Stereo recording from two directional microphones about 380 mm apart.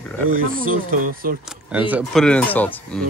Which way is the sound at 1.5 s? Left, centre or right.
Centre.